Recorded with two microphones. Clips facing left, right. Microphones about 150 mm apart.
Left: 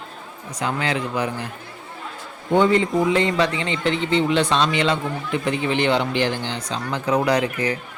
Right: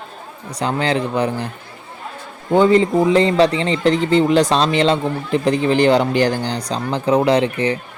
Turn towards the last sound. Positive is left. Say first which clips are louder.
# right 5 dB
turn(degrees=-30)  # may be behind; listen again after turning